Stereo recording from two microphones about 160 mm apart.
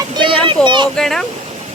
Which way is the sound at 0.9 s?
5° left (ahead or behind).